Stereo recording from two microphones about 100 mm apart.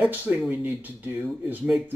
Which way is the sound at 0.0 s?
10° right (ahead or behind).